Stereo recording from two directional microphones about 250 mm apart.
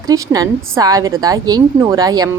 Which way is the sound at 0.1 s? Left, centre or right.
Centre.